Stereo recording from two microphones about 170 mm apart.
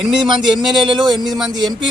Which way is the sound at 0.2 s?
25° right (ahead or behind).